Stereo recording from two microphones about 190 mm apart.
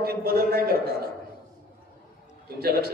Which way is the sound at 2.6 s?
55° right (ahead or behind).